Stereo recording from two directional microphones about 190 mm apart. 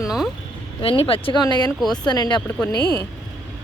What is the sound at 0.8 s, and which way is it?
Speech, 30° left (ahead or behind).